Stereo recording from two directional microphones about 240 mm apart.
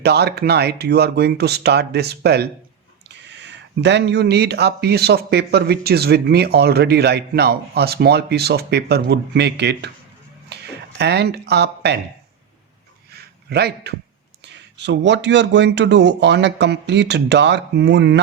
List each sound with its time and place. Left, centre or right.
0.0 s speech: right
13.1 s a sound: right
14.4 s speech: right